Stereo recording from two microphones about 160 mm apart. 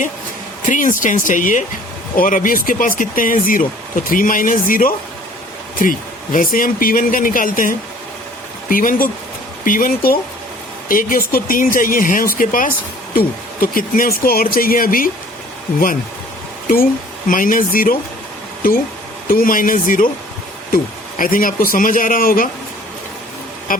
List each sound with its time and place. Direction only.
0.7 s speech: 55° left (ahead or behind)
16.6 s speech: 60° left (ahead or behind)
19.3 s speech: 60° left (ahead or behind)
21.2 s speech: 60° left (ahead or behind)